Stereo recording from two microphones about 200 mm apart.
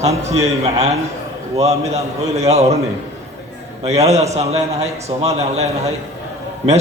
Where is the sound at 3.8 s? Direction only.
30° right (ahead or behind).